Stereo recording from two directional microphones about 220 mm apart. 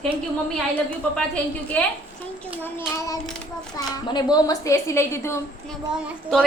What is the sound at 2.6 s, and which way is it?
A woman's voice, 10° left (ahead or behind).